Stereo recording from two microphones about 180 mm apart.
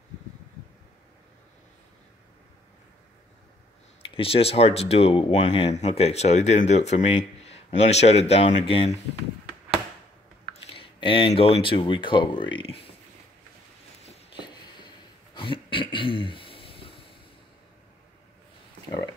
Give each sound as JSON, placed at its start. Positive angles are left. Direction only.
{"t": 4.0, "sound": "speech", "side_deg": 30}
{"t": 10.7, "sound": "speech", "side_deg": 30}
{"t": 15.3, "sound": "a sound", "side_deg": 30}